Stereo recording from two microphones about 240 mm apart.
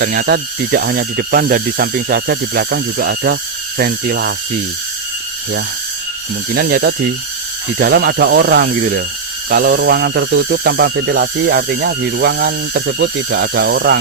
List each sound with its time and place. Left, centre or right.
0.0 s speech: right
6.5 s speech: right